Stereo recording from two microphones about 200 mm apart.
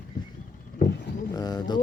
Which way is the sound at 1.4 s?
20° left (ahead or behind).